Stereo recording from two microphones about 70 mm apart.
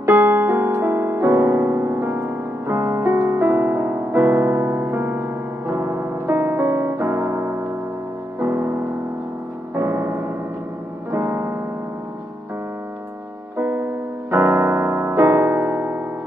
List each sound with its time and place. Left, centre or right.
0.0 s music: right
2.6 s music: right
13.6 s music: right